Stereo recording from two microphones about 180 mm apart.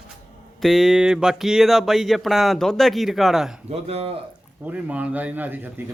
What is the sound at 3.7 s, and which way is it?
Speech, 35° right (ahead or behind).